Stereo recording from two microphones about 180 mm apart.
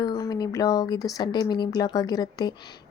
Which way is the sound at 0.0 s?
20° left (ahead or behind).